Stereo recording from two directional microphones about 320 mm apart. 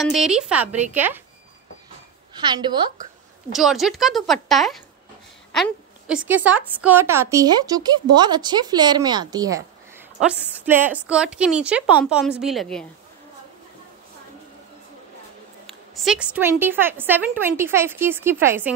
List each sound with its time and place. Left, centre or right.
0.0 s a woman's voice: centre
0.7 s a woman's voice: right
0.9 s a woman's voice: centre
2.3 s speech: centre
3.5 s a woman's voice: centre
15.6 s speech: centre